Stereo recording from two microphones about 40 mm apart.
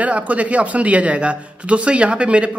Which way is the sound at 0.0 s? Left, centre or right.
Right.